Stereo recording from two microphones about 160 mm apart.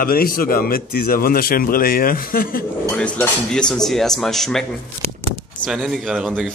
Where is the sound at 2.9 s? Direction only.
5° left (ahead or behind).